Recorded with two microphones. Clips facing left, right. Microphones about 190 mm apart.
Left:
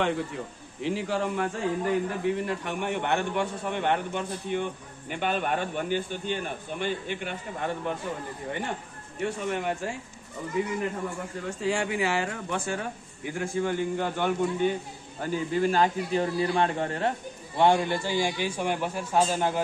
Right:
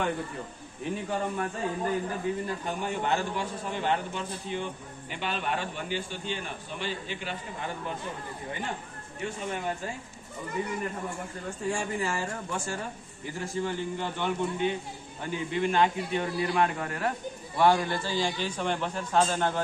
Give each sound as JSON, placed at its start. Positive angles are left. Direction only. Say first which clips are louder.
{"t": 0.8, "sound": "a man's voice", "louder": "left 3 dB", "side_deg": 90}
{"t": 9.2, "sound": "a man's voice", "louder": "left 4 dB", "side_deg": 70}
{"t": 11.6, "sound": "a man's voice", "louder": "left 3 dB", "side_deg": 80}
{"t": 17.6, "sound": "a man's voice", "louder": "left 2 dB", "side_deg": 20}